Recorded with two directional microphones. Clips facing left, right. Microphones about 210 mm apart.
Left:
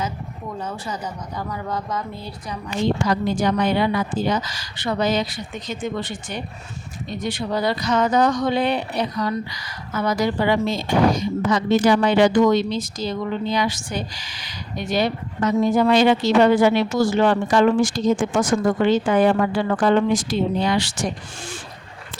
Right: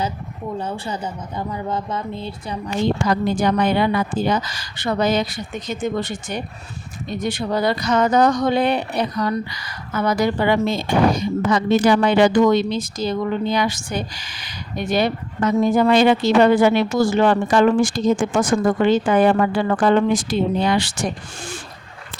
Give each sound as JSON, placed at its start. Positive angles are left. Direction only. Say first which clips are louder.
{"t": 0.6, "sound": "a woman's voice", "louder": "even", "side_deg": -30}
{"t": 3.1, "sound": "speech", "louder": "right 2 dB", "side_deg": -55}